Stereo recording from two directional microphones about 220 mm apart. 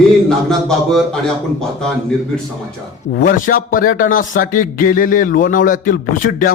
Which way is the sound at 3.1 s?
40° left (ahead or behind).